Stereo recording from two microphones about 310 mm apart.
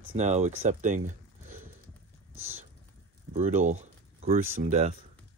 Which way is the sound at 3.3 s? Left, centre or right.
Right.